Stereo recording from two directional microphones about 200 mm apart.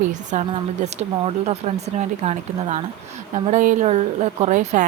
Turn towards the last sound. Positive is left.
turn(degrees=-40)  # may be behind; listen again after turning